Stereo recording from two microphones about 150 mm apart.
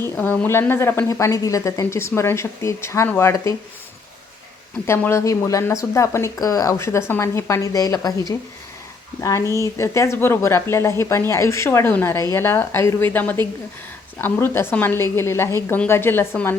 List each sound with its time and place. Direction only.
0.0 s speech: 10° left (ahead or behind)
4.9 s speech: 15° left (ahead or behind)
9.2 s speech: 20° left (ahead or behind)